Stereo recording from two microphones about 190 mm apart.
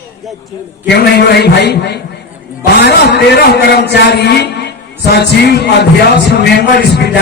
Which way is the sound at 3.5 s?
60° left (ahead or behind).